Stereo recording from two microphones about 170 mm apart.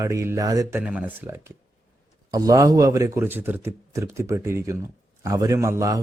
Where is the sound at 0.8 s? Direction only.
10° right (ahead or behind).